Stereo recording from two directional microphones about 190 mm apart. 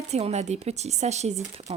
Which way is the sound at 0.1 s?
35° right (ahead or behind).